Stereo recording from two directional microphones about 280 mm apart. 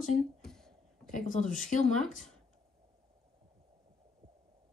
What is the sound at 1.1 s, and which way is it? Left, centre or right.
Speech, left.